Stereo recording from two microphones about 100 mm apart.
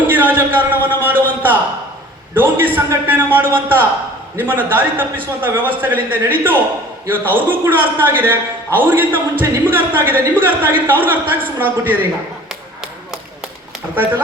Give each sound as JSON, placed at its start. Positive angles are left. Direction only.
{"t": 0.1, "sound": "a man's voice", "side_deg": -20}
{"t": 13.9, "sound": "speech", "side_deg": -20}